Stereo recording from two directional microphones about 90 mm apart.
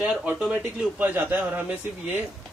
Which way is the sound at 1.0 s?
20° right (ahead or behind).